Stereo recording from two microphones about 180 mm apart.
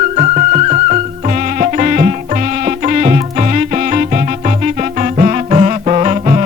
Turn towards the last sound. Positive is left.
turn(degrees=-40)  # may be behind; listen again after turning